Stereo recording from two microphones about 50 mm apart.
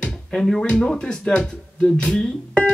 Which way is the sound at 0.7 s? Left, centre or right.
Centre.